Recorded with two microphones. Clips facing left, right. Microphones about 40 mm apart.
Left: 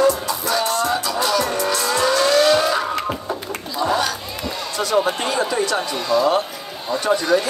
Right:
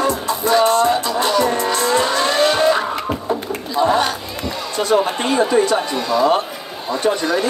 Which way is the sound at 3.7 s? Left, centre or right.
Right.